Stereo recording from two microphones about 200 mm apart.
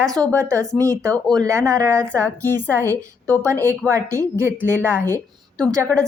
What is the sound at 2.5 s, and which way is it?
Speech, 10° left (ahead or behind).